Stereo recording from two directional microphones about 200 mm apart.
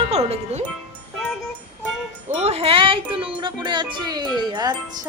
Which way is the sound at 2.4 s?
30° right (ahead or behind).